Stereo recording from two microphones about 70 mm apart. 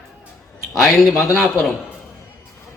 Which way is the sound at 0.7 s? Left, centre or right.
Centre.